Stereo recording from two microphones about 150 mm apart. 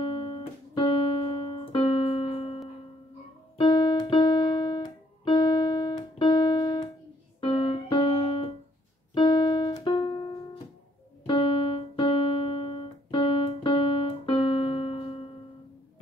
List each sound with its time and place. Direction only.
0.0 s keyboard: 40° left (ahead or behind)
3.5 s piano: 30° left (ahead or behind)
7.3 s keyboard: 35° left (ahead or behind)
11.2 s piano: 35° left (ahead or behind)